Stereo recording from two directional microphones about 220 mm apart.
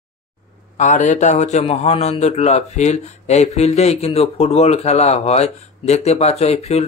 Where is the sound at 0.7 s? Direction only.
35° left (ahead or behind).